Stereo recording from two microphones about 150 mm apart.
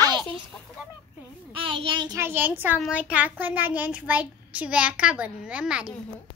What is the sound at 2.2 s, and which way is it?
A child's voice, 15° right (ahead or behind).